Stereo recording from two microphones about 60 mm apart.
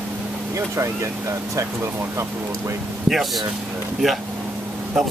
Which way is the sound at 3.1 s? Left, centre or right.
Centre.